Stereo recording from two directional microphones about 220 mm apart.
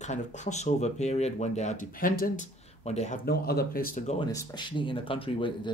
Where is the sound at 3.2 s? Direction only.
45° left (ahead or behind).